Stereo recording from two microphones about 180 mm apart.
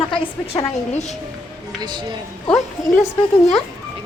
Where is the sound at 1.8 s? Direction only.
25° right (ahead or behind).